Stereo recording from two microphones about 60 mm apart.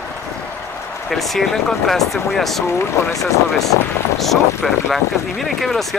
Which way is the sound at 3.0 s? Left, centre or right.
Left.